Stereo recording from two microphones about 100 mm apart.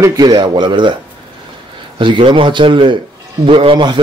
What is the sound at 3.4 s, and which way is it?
Speech, 65° right (ahead or behind).